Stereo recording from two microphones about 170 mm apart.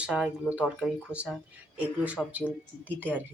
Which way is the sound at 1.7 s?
10° right (ahead or behind).